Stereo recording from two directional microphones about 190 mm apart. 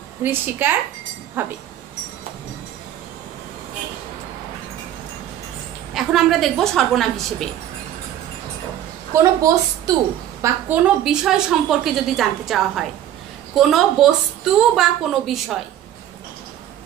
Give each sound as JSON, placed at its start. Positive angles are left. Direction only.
{"t": 0.2, "sound": "a woman's voice", "side_deg": -10}
{"t": 5.9, "sound": "a woman's voice", "side_deg": 0}
{"t": 9.1, "sound": "a woman's voice", "side_deg": -15}